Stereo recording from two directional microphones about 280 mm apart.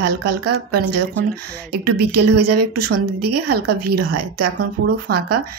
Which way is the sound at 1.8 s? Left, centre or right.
Right.